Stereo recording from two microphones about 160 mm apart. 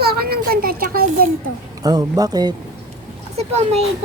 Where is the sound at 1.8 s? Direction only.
25° right (ahead or behind).